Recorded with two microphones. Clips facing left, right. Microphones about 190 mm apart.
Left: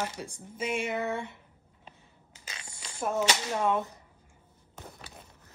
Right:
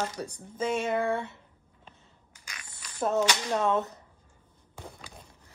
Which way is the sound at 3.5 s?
10° left (ahead or behind).